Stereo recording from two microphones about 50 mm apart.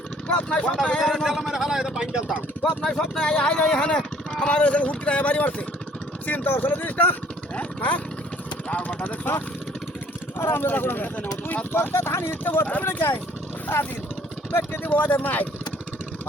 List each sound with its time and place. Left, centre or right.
0.3 s speech: left
0.9 s a man's voice: centre
2.6 s speech: centre
6.2 s speech: left
14.9 s speech: left